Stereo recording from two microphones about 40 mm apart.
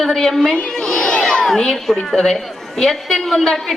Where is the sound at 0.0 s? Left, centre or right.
Centre.